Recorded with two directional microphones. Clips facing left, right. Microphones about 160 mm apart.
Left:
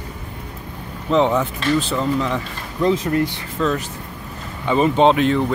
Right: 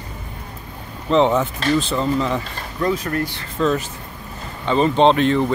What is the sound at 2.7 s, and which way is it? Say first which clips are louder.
Speech: left 3 dB; 20° left (ahead or behind).